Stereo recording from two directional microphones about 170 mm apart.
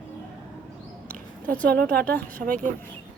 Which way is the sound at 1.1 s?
10° left (ahead or behind).